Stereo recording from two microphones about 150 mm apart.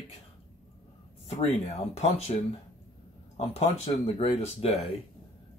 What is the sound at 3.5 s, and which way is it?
Speech, 45° left (ahead or behind).